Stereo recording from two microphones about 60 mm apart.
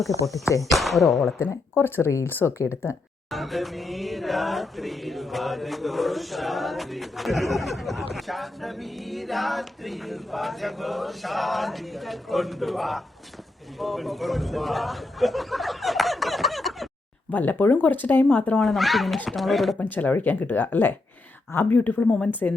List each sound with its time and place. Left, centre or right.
0.7 s chant: centre
1.4 s speech: left
3.3 s chant: centre
13.7 s a sound: centre
17.3 s speech: left
18.3 s speech: centre
18.6 s chant: centre
19.8 s speech: left